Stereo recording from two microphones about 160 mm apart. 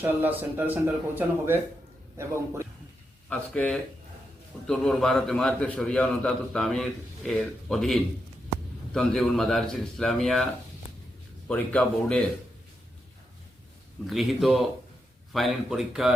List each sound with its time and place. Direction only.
0.0 s speech: 10° right (ahead or behind)
3.2 s a man's voice: 5° left (ahead or behind)
14.1 s a man's voice: centre (ahead or behind)